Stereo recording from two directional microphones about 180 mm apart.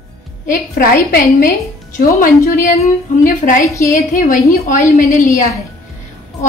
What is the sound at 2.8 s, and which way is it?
Speech, 50° left (ahead or behind).